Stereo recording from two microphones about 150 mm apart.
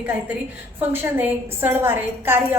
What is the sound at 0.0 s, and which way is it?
A woman's voice, 10° right (ahead or behind).